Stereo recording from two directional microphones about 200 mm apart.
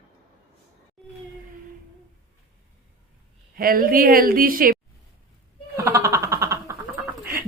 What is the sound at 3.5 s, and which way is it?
A woman's voice, 45° right (ahead or behind).